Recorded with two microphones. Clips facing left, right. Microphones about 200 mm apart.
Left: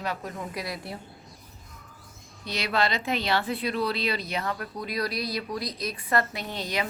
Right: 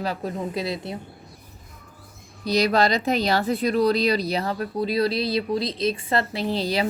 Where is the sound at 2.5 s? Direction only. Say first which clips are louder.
Right 8 dB; 40° right (ahead or behind).